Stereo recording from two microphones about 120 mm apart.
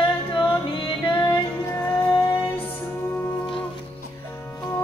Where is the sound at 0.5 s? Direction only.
45° left (ahead or behind).